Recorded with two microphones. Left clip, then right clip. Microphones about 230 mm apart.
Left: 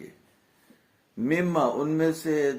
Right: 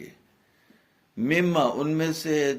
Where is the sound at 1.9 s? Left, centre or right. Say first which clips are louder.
Left 1 dB; right.